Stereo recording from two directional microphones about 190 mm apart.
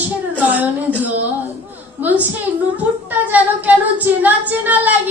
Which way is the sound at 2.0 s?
10° right (ahead or behind).